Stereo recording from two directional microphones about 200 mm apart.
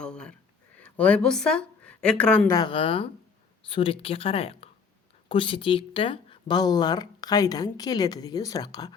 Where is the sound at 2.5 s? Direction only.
20° left (ahead or behind).